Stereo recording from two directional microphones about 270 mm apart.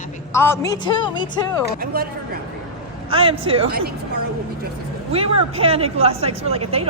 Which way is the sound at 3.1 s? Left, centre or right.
Centre.